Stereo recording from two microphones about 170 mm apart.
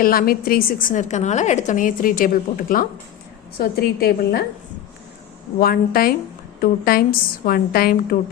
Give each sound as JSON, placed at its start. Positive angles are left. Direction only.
{"t": 0.0, "sound": "a woman's voice", "side_deg": 55}
{"t": 5.5, "sound": "a woman's voice", "side_deg": 60}